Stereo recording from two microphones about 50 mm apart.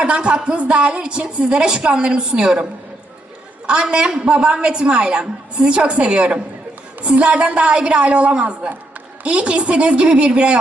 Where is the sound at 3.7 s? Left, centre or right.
Centre.